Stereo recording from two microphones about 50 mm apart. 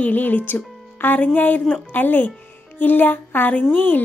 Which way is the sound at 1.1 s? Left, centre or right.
Left.